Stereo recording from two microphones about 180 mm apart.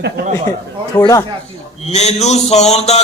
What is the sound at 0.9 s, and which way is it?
Speech, 15° left (ahead or behind).